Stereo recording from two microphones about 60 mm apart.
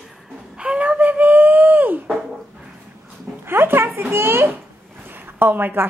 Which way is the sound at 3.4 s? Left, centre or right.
Right.